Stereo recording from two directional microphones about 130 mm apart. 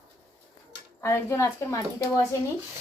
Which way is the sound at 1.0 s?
20° left (ahead or behind).